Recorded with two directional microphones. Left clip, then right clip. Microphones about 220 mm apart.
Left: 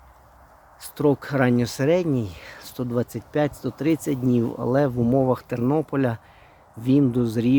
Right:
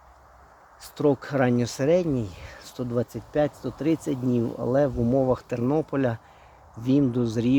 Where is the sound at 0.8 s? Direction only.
10° left (ahead or behind).